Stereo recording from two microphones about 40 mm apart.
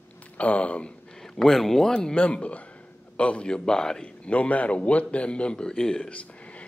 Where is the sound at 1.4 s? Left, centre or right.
Centre.